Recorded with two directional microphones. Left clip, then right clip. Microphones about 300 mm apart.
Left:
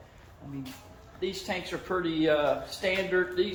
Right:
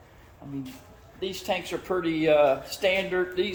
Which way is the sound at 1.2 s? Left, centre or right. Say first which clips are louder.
Right 3 dB; right.